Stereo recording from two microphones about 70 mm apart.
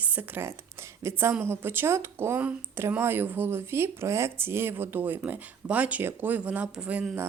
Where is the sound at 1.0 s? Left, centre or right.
Right; by 7.0 s centre.